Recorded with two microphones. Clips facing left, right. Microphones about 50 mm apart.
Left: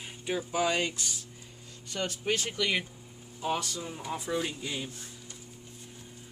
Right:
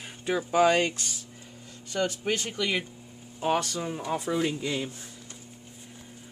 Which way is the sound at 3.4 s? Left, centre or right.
Right.